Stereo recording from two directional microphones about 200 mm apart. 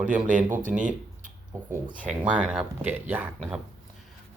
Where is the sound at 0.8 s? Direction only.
40° right (ahead or behind).